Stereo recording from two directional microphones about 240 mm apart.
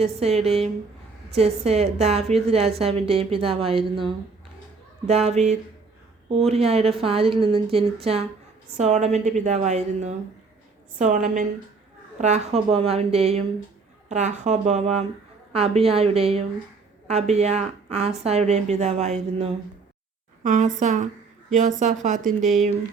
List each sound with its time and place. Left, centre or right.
0.0 s a woman's voice: right